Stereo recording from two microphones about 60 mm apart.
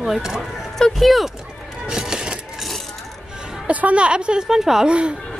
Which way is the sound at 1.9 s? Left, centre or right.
Centre.